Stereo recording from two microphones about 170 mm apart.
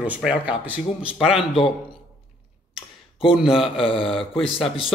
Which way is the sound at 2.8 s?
30° left (ahead or behind).